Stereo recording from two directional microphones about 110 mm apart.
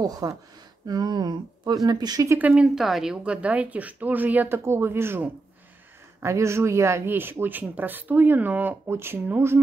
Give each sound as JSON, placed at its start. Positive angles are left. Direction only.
{"t": 0.0, "sound": "speech", "side_deg": -35}
{"t": 2.2, "sound": "speech", "side_deg": -15}